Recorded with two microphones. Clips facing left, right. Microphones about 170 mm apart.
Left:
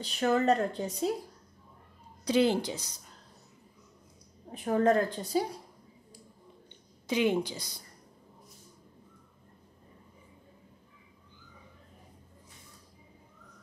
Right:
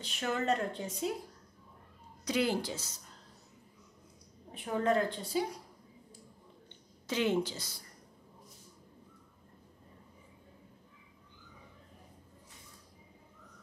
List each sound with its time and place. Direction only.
0.0 s speech: 35° left (ahead or behind)
2.2 s a woman's voice: 25° left (ahead or behind)
4.6 s a woman's voice: 45° left (ahead or behind)
7.1 s a woman's voice: 15° left (ahead or behind)